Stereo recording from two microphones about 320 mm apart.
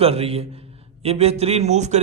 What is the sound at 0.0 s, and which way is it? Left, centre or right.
A man's voice, centre.